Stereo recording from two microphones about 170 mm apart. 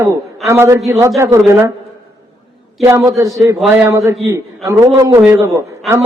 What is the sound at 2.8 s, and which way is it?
Speech, 15° right (ahead or behind).